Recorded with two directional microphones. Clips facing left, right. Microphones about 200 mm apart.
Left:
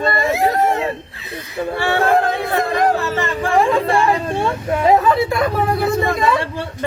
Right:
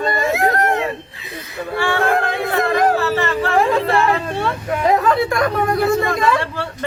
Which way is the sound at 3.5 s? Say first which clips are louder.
Left 2 dB; centre (ahead or behind).